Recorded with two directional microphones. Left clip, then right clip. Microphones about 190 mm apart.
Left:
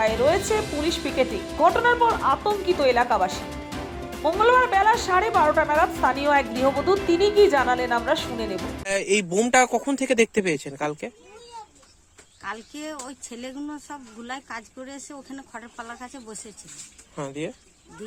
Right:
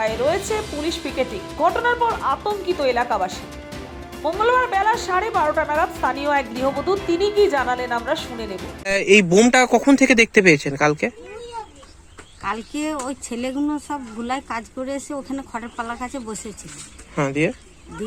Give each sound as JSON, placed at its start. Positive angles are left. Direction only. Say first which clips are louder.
{"t": 0.0, "sound": "speech", "louder": "even", "side_deg": 0}
{"t": 12.5, "sound": "speech", "louder": "right 8 dB", "side_deg": 5}
{"t": 14.5, "sound": "speech", "louder": "right 10 dB", "side_deg": 25}
{"t": 17.2, "sound": "speech", "louder": "right 11 dB", "side_deg": 5}